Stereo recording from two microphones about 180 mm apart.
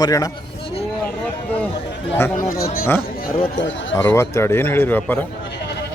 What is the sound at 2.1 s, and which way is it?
Speech, 15° left (ahead or behind).